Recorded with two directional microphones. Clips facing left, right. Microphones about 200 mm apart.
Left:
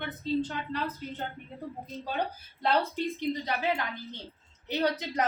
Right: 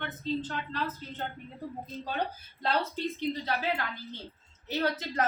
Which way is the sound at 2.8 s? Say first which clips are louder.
Left 1 dB; 15° left (ahead or behind).